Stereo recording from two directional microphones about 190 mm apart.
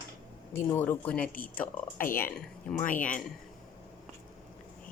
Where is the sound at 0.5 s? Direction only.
10° left (ahead or behind).